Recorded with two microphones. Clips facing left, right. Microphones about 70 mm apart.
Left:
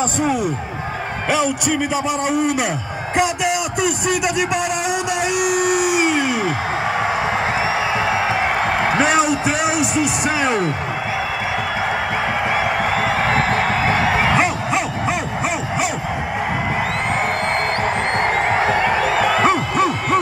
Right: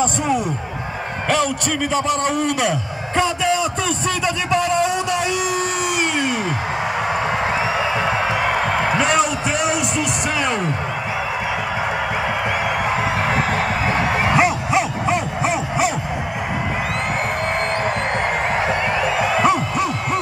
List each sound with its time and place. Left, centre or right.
1.3 s a man's voice: centre
4.5 s a sound: centre
8.9 s speech: centre
14.3 s a sound: centre
18.7 s music: left
19.1 s music: left
19.4 s music: left